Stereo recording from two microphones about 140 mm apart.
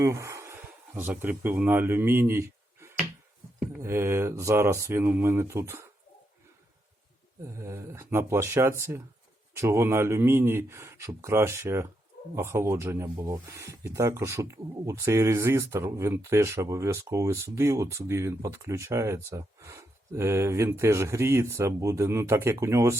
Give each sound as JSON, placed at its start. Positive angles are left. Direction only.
{"t": 0.0, "sound": "speech", "side_deg": -20}
{"t": 7.4, "sound": "speech", "side_deg": -20}